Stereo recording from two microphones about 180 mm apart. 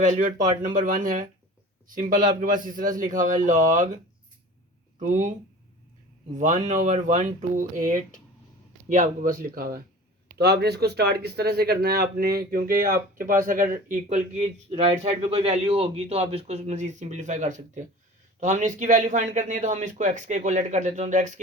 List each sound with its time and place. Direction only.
0.0 s speech: 45° right (ahead or behind)
4.9 s speech: 45° right (ahead or behind)
6.3 s speech: 45° right (ahead or behind)